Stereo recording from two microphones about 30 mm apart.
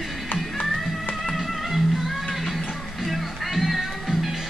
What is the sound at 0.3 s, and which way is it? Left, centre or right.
Music, left.